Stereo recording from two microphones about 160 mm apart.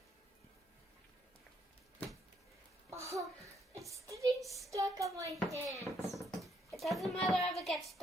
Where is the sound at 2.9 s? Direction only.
20° right (ahead or behind).